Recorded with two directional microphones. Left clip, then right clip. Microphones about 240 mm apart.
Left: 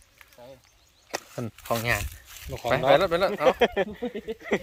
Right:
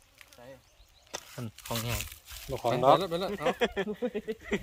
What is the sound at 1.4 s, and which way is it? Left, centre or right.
Speech, left.